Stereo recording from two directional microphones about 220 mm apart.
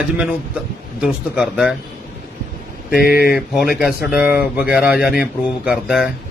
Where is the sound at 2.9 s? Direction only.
45° left (ahead or behind).